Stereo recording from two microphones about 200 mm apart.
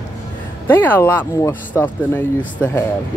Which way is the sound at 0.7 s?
10° left (ahead or behind).